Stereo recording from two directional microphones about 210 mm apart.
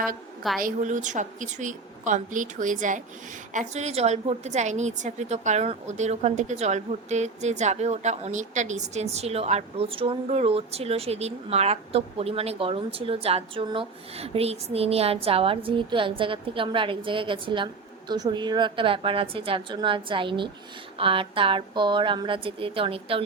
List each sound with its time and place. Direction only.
0.6 s a woman's voice: 35° right (ahead or behind)